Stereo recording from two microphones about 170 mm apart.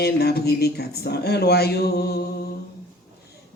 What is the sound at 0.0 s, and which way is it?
Speech, 70° left (ahead or behind).